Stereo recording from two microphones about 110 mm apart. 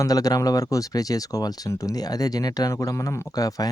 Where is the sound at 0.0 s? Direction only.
35° left (ahead or behind).